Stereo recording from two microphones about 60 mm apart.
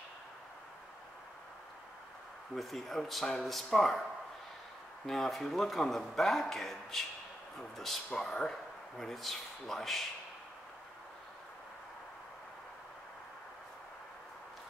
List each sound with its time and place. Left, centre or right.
2.5 s speech: centre
5.0 s speech: centre